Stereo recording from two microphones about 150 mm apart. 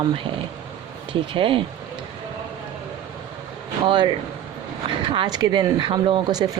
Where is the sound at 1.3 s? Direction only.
35° right (ahead or behind).